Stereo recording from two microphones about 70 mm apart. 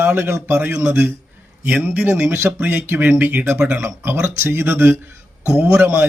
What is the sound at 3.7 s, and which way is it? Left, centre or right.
Speech, centre.